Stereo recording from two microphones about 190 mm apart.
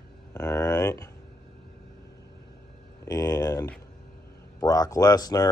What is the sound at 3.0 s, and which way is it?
Speech, 20° left (ahead or behind).